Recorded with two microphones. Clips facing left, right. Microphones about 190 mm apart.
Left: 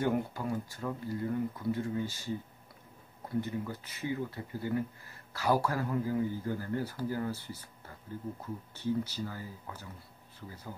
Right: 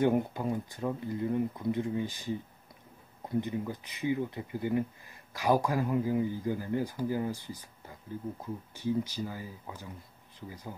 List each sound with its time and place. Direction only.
0.0 s speech: 20° right (ahead or behind)
3.3 s speech: 15° right (ahead or behind)